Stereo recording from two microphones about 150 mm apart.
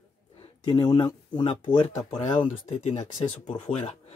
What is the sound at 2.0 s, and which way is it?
Speech, 45° left (ahead or behind).